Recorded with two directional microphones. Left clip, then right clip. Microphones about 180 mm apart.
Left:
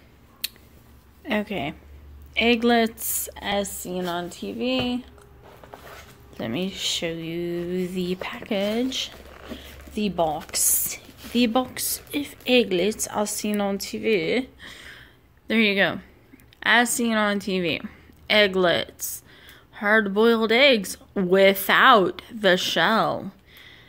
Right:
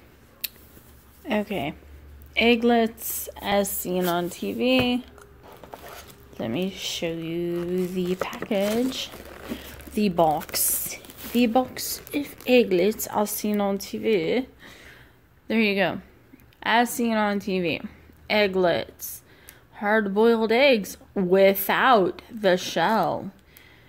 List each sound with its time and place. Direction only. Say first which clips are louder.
0.4 s a sound: left 4 dB; 5° right (ahead or behind)
1.2 s a woman's voice: even; 5° right (ahead or behind)
2.6 s speech: left 1 dB; centre (ahead or behind)
3.5 s speech: right 5 dB; 25° right (ahead or behind)
5.7 s a sound: right 2 dB; 60° right (ahead or behind)
6.3 s speech: even; 5° right (ahead or behind)
9.5 s speech: right 2 dB; 25° right (ahead or behind)
11.3 s a woman's voice: right 1 dB; 5° right (ahead or behind)